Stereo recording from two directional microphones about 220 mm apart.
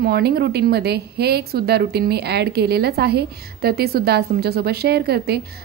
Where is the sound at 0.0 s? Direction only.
45° right (ahead or behind).